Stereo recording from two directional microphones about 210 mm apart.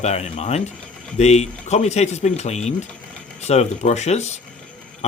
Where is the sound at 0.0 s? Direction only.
30° left (ahead or behind).